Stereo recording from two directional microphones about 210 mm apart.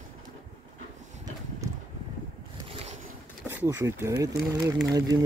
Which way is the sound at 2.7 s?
30° right (ahead or behind).